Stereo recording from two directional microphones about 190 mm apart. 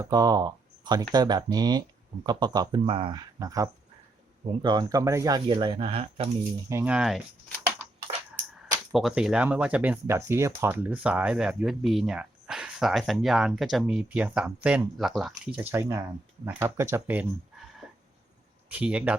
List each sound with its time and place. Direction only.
0.0 s speech: 20° right (ahead or behind)
6.7 s speech: 10° right (ahead or behind)
8.9 s speech: centre (ahead or behind)